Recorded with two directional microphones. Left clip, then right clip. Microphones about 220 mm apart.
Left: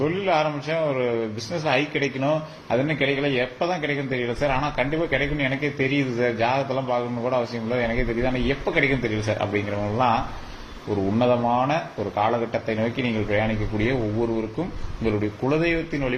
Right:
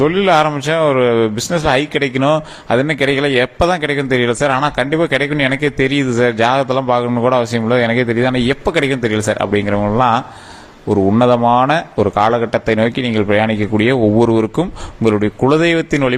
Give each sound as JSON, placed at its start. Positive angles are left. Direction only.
{"t": 0.0, "sound": "a man's voice", "side_deg": -45}
{"t": 11.2, "sound": "a man's voice", "side_deg": -50}